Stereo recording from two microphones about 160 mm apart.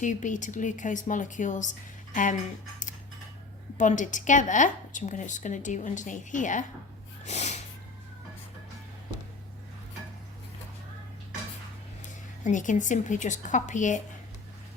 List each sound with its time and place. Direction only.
0.0 s a woman's voice: 50° left (ahead or behind)
3.8 s a woman's voice: 50° left (ahead or behind)
7.3 s snort: 45° left (ahead or behind)
12.0 s speech: 50° left (ahead or behind)